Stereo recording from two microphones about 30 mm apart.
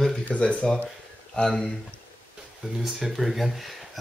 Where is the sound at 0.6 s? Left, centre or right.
Left.